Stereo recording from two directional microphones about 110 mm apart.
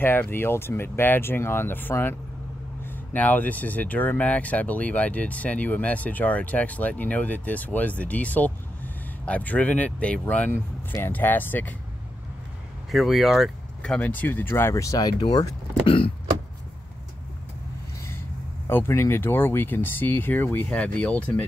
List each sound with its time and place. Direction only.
0.0 s speech: 20° left (ahead or behind)
12.9 s speech: centre (ahead or behind)
13.9 s speech: 15° left (ahead or behind); by 15.5 s 35° left (ahead or behind)
18.7 s speech: 20° left (ahead or behind)